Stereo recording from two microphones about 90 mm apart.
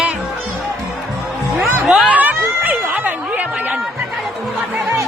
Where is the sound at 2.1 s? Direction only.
20° right (ahead or behind).